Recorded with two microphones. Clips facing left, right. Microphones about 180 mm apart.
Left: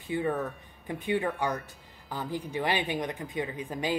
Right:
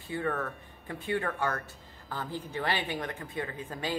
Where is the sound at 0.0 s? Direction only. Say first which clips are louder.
Left 3 dB; 15° left (ahead or behind).